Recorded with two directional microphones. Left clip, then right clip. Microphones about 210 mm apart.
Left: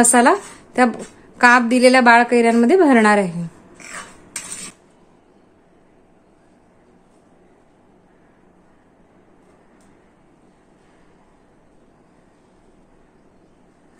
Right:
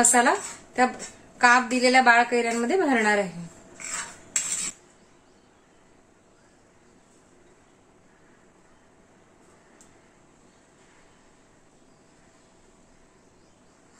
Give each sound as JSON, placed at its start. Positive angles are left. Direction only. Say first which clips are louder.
{"t": 0.0, "sound": "a woman's voice", "louder": "left 7 dB", "side_deg": 55}